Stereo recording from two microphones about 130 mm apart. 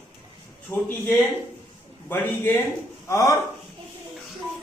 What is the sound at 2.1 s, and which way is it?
A man's voice, 15° left (ahead or behind).